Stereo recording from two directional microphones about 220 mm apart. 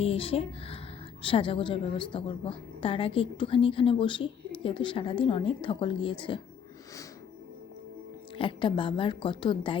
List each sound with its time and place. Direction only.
0.0 s a woman's voice: 25° left (ahead or behind)
8.4 s a woman's voice: 20° left (ahead or behind)